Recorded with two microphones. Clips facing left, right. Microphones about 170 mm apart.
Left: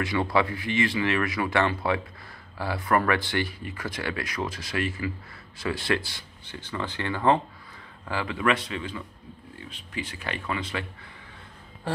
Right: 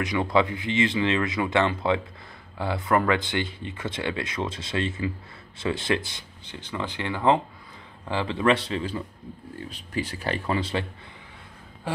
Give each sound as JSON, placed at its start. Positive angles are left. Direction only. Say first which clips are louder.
{"t": 0.0, "sound": "speech", "louder": "right 2 dB", "side_deg": -20}